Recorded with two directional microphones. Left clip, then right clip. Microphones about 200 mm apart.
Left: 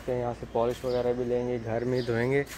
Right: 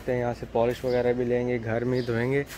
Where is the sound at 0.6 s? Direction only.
20° right (ahead or behind).